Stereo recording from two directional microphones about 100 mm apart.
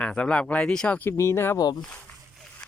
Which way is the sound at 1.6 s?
40° left (ahead or behind).